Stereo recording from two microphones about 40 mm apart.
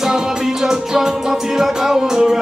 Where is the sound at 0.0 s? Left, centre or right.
Centre.